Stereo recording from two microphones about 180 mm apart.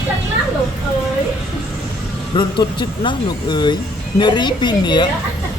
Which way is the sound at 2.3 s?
25° left (ahead or behind).